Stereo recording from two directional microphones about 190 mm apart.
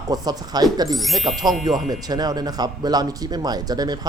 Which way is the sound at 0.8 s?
Centre (ahead or behind).